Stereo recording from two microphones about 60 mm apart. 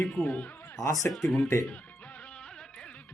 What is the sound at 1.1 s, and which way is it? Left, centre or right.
Speech, centre.